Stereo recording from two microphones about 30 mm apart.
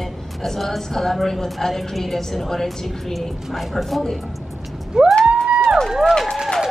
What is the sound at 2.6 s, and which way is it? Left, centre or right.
A woman's voice, centre.